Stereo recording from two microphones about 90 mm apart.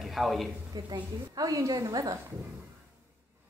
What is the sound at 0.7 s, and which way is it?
A woman's voice, 50° right (ahead or behind).